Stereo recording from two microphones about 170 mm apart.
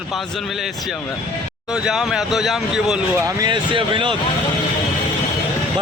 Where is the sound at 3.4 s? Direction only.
25° right (ahead or behind).